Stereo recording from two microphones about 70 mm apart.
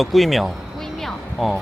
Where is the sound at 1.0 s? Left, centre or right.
Centre.